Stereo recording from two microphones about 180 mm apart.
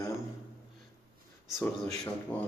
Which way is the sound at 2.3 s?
10° left (ahead or behind).